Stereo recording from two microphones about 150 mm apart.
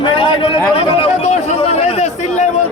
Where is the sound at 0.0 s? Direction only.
35° left (ahead or behind).